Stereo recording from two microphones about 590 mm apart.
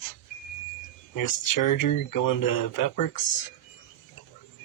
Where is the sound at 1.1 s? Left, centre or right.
Left.